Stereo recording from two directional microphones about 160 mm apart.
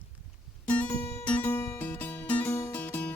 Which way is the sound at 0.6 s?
10° left (ahead or behind).